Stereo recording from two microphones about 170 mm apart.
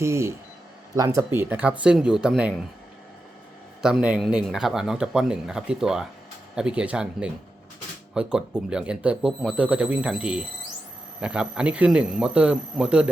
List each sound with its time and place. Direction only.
0.0 s speech: 15° right (ahead or behind); by 2.6 s centre (ahead or behind)
3.8 s speech: 5° right (ahead or behind)